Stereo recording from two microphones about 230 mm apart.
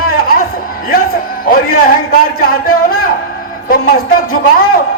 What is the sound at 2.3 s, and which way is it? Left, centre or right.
A man's voice, left.